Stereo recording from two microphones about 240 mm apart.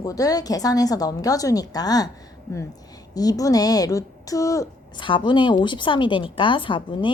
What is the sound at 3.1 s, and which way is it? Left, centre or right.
A woman's voice, centre.